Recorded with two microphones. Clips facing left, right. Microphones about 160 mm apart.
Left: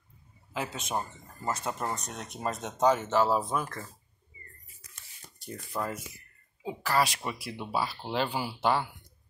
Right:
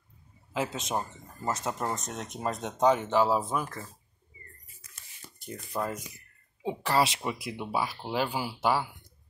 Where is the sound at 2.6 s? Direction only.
Centre (ahead or behind).